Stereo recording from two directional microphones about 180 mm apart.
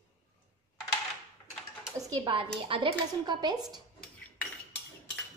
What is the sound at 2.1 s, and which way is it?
A woman's voice, 25° right (ahead or behind).